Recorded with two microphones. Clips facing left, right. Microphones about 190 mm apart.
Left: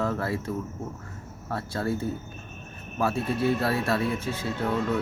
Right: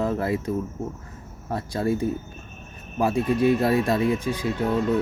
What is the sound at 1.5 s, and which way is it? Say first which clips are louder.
Speech: right 4 dB; 15° right (ahead or behind).